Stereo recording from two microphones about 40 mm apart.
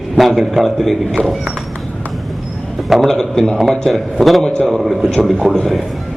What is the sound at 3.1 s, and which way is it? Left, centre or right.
A man's voice, centre.